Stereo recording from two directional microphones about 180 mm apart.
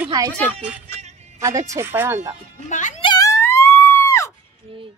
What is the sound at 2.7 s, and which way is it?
Speech, 45° left (ahead or behind).